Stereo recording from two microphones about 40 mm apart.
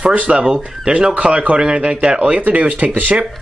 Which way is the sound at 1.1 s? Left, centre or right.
Right.